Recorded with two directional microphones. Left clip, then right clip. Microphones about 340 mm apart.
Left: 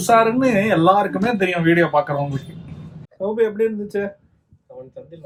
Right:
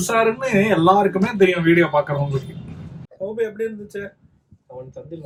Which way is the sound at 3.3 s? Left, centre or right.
Left.